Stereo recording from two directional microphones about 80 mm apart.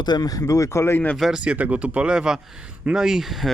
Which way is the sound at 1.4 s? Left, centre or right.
Centre.